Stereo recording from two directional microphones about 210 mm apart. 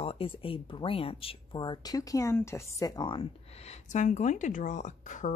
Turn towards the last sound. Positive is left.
turn(degrees=35)  # may be behind; listen again after turning